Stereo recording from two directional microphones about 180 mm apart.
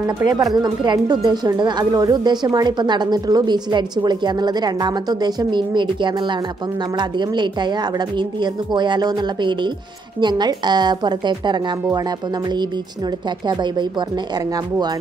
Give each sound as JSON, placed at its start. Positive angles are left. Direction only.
{"t": 0.6, "sound": "a woman's voice", "side_deg": -20}